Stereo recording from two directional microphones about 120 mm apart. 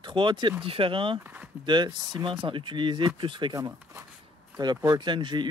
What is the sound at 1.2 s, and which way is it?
Speech, 15° right (ahead or behind).